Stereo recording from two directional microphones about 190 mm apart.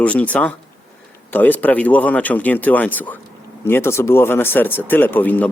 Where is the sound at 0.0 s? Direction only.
5° left (ahead or behind).